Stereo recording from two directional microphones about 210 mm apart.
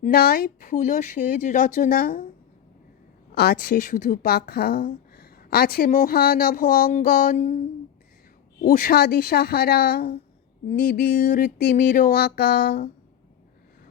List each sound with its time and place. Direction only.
0.0 s speech: 45° left (ahead or behind)
3.3 s a woman's voice: 50° left (ahead or behind)
8.6 s a woman's voice: 45° left (ahead or behind)